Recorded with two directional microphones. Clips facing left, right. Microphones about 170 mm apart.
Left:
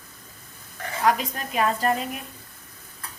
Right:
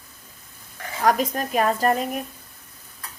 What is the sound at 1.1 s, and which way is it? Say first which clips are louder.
A woman's voice: right 3 dB; 45° right (ahead or behind).